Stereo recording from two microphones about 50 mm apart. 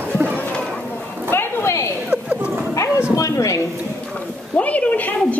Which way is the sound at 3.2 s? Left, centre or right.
Left.